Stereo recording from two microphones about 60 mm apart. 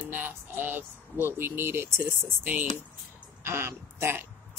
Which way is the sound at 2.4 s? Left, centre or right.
Right.